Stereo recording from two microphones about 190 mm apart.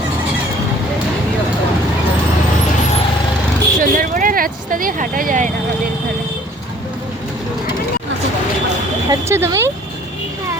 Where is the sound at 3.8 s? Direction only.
45° right (ahead or behind).